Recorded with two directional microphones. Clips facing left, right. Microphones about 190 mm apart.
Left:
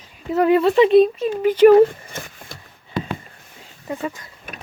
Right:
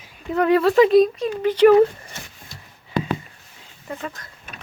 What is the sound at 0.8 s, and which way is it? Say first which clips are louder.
Speech: left 1 dB; 30° left (ahead or behind).